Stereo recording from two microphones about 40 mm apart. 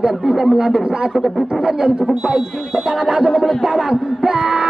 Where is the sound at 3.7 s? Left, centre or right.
Centre.